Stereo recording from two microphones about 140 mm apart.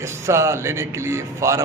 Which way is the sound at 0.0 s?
20° right (ahead or behind).